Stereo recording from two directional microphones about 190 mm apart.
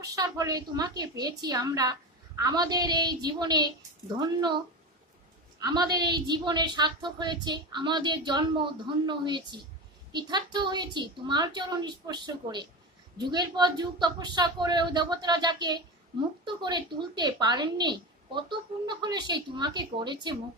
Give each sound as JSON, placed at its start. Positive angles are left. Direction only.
{"t": 0.0, "sound": "a woman's voice", "side_deg": -20}
{"t": 5.6, "sound": "a woman's voice", "side_deg": -20}